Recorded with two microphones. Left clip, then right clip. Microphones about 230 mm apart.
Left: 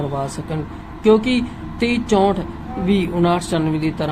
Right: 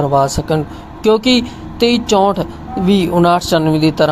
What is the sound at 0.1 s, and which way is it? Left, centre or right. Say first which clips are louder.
Speech: right 12 dB; right.